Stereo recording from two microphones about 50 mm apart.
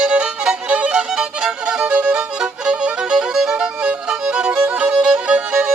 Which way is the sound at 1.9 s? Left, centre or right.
Right.